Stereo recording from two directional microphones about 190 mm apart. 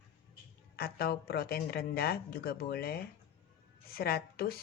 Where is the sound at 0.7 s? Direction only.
55° left (ahead or behind).